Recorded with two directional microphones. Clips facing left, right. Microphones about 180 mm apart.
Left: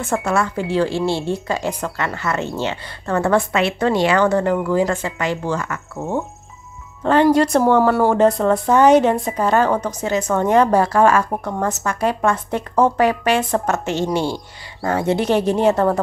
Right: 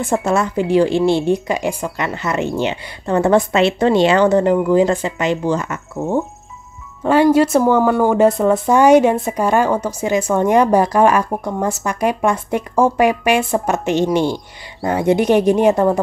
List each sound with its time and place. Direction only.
0.0 s a woman's voice: 20° right (ahead or behind)